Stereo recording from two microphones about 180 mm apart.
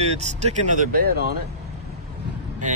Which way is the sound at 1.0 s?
60° right (ahead or behind).